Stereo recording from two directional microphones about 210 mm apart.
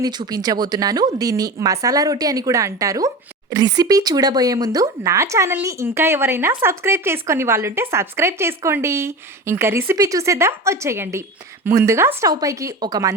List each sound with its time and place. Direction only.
0.0 s speech: 20° right (ahead or behind)